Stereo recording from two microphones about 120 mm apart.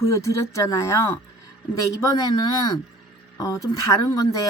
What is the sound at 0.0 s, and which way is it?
Speech, 25° left (ahead or behind).